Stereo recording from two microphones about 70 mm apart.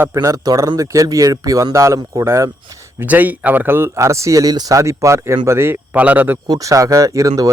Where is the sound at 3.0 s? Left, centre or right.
Right.